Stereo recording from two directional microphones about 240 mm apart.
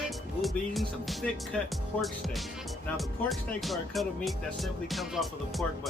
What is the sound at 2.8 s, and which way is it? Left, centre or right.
Speech, centre.